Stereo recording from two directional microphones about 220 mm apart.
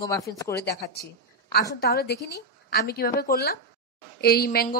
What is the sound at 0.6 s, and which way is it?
A woman's voice, 45° left (ahead or behind).